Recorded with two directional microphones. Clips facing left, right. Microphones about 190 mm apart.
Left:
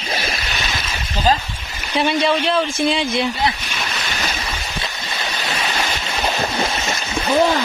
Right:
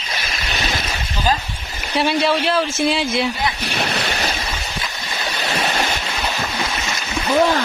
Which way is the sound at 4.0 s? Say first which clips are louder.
Right 3 dB; 35° right (ahead or behind).